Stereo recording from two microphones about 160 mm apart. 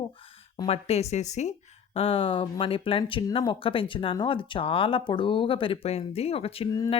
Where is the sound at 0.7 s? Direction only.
40° left (ahead or behind).